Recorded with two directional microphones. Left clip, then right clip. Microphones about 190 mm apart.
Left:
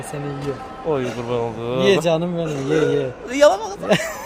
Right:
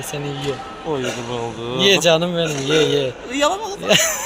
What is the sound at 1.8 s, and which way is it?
Speech, 5° left (ahead or behind).